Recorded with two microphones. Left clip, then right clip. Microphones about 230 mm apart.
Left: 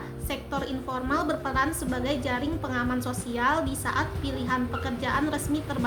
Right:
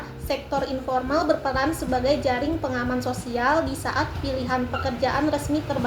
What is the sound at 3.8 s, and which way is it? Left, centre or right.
A woman's voice, left.